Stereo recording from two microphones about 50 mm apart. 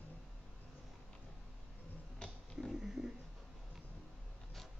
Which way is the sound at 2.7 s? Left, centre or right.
Centre.